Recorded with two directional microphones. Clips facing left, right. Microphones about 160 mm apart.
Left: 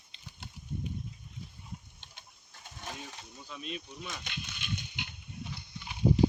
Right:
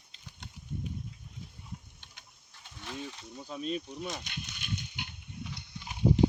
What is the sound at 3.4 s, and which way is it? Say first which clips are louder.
Speech: right 7 dB; 40° right (ahead or behind).